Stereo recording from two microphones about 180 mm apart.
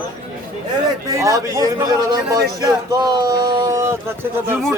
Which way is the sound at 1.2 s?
20° right (ahead or behind).